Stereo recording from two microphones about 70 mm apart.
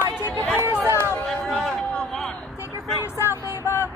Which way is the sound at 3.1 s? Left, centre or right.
Left.